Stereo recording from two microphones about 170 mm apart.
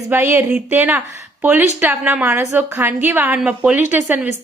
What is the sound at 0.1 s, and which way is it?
A woman's voice, 10° right (ahead or behind).